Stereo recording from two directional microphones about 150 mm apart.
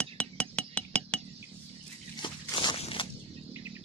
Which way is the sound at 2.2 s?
30° left (ahead or behind).